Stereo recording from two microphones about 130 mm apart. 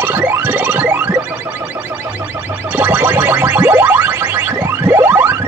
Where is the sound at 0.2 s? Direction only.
15° right (ahead or behind).